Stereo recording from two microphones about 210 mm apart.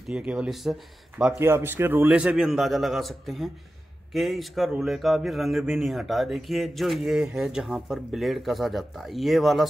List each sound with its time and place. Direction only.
0.1 s a man's voice: 5° right (ahead or behind)